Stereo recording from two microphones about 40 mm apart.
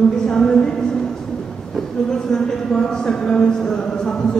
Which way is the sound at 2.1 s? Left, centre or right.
Centre.